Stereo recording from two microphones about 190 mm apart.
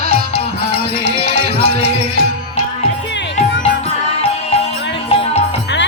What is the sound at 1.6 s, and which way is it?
Music, 60° right (ahead or behind).